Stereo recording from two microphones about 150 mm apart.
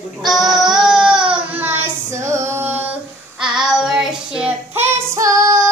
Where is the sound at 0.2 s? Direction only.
Centre (ahead or behind).